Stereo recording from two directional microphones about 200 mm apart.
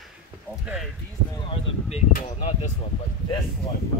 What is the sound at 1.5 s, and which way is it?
Speech, 30° left (ahead or behind).